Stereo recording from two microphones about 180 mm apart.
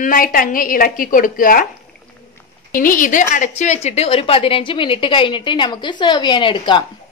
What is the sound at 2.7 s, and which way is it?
A woman's voice, 50° left (ahead or behind).